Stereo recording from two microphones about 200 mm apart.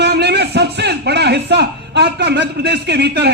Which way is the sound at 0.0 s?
55° right (ahead or behind).